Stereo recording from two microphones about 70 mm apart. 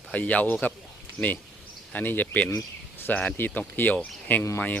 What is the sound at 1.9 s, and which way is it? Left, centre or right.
A man's voice, left.